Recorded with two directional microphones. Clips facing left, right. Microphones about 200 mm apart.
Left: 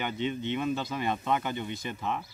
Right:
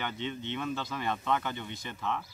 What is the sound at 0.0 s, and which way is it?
Speech, 15° left (ahead or behind).